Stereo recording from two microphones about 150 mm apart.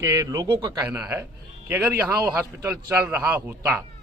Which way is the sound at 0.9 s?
15° right (ahead or behind).